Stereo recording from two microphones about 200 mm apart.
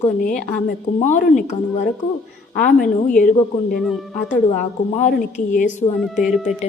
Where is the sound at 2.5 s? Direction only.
40° left (ahead or behind).